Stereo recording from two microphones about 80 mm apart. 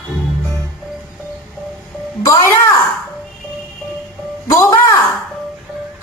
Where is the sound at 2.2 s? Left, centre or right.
Left.